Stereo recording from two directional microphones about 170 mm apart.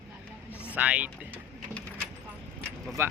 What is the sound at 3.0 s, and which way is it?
Speech, 15° right (ahead or behind).